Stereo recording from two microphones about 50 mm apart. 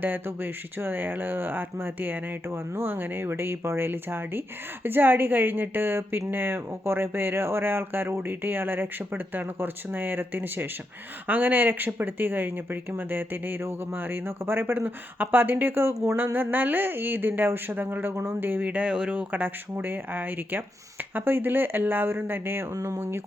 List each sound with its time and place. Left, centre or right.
0.3 s speech: right
11.3 s speech: right
18.6 s speech: right
19.7 s speech: right
22.7 s speech: right